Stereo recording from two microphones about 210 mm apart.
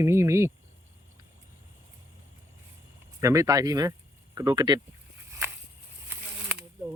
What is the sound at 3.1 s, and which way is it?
Speech, 15° right (ahead or behind).